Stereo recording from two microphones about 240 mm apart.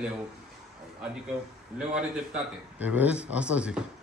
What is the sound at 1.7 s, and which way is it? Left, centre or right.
A man's voice, centre.